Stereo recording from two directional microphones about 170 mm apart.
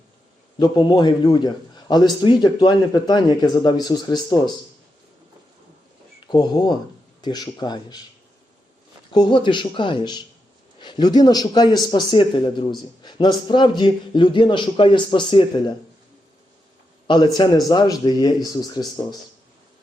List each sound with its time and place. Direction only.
0.6 s a man's voice: 25° left (ahead or behind)
6.2 s a man's voice: 25° left (ahead or behind)
9.1 s a man's voice: 25° left (ahead or behind)
17.1 s a man's voice: 30° left (ahead or behind)